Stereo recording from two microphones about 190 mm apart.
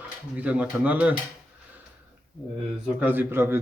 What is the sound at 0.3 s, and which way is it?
Speech, 5° right (ahead or behind).